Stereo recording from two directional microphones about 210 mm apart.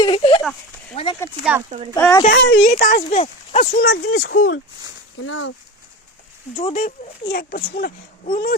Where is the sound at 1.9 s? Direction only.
10° left (ahead or behind).